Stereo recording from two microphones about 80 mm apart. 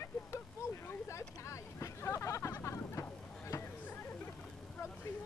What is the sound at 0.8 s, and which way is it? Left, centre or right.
Vehicle, left.